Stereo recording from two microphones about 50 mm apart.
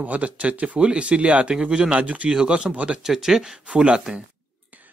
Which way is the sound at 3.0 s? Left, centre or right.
Centre.